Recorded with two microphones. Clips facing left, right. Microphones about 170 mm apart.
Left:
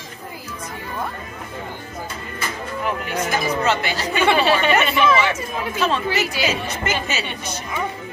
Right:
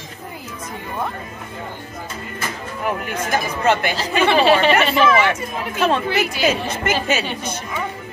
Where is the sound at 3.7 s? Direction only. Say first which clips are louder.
Right 7 dB; 50° right (ahead or behind).